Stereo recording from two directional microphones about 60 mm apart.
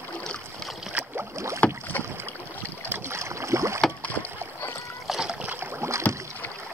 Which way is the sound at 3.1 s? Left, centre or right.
Right.